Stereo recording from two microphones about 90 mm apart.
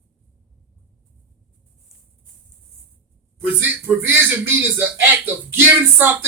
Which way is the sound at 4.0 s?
20° right (ahead or behind).